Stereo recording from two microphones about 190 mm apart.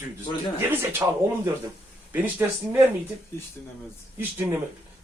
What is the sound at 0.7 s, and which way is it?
A man's voice, 15° right (ahead or behind).